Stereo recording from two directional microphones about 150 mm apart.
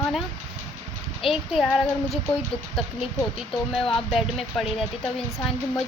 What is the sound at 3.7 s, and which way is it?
Speech, centre (ahead or behind).